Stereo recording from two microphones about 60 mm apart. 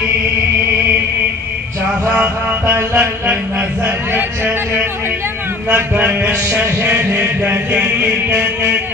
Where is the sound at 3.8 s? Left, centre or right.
Right.